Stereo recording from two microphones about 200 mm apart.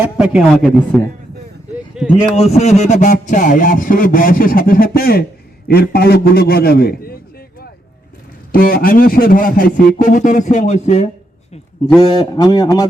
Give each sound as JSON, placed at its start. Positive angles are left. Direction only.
{"t": 0.0, "sound": "speech", "side_deg": -5}
{"t": 2.0, "sound": "speech", "side_deg": -5}
{"t": 2.3, "sound": "a man's voice", "side_deg": 30}
{"t": 11.9, "sound": "speech", "side_deg": 20}